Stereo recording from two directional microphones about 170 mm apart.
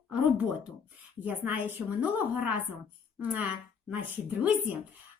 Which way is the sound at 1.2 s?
10° right (ahead or behind).